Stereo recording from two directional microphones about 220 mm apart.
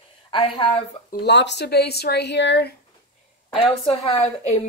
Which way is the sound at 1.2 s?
50° left (ahead or behind).